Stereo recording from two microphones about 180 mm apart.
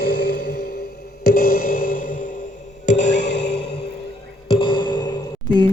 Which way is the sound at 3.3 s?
70° left (ahead or behind).